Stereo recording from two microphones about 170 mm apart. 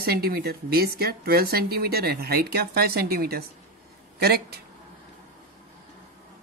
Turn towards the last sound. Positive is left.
turn(degrees=-70)  # may be behind; listen again after turning